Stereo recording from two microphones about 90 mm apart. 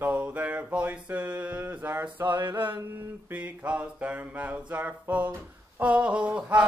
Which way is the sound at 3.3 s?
15° right (ahead or behind).